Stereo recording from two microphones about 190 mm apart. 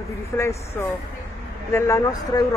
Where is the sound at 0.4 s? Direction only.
15° left (ahead or behind).